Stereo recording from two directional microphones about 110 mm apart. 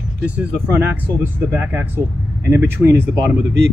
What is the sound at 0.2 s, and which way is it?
Speech, 15° right (ahead or behind).